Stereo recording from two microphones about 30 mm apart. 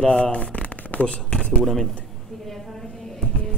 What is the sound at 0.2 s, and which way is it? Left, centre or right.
Shuffling cards, left.